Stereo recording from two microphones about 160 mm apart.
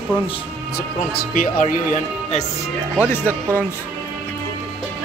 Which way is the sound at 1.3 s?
55° left (ahead or behind).